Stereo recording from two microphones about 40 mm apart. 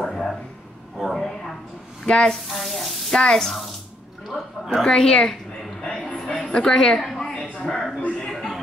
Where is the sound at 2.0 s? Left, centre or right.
Left.